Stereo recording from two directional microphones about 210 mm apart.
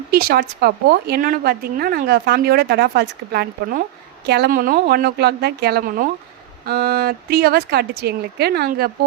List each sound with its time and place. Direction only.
0.1 s a woman's voice: 45° right (ahead or behind)